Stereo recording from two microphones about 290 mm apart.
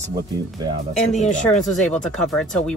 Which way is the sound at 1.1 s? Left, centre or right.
Left.